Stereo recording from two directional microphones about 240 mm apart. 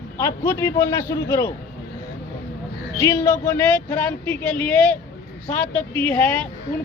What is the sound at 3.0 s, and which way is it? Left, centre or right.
Speech, centre.